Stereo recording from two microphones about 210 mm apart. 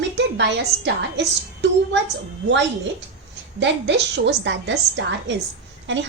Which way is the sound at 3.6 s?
60° right (ahead or behind).